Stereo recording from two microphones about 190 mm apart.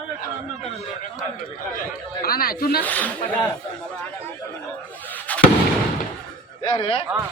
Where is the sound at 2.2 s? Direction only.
50° left (ahead or behind).